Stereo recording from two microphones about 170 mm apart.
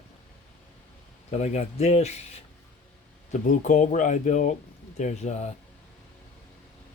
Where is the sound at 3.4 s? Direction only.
50° left (ahead or behind).